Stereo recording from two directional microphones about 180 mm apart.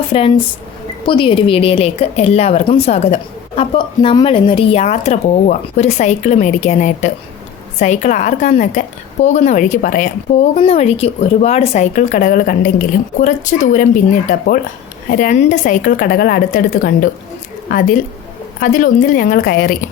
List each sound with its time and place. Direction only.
0.1 s a woman's voice: 30° left (ahead or behind); by 19.7 s 55° left (ahead or behind)